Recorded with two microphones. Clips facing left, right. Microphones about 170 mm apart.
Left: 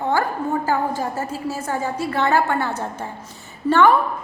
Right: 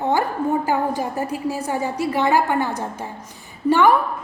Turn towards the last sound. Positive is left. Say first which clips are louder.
# even
turn(degrees=-15)  # may be behind; listen again after turning